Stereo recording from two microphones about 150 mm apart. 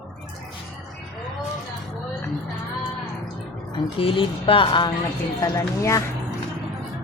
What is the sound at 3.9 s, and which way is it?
Speech, 35° left (ahead or behind).